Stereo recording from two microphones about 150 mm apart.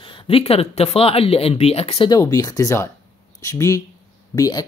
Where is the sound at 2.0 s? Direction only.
25° left (ahead or behind).